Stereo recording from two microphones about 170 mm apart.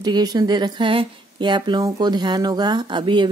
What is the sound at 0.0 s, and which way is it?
Speech, 25° right (ahead or behind).